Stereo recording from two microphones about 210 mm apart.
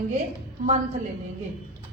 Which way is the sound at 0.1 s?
35° right (ahead or behind).